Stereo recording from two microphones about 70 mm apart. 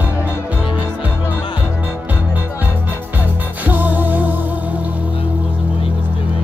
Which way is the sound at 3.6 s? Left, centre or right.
Right.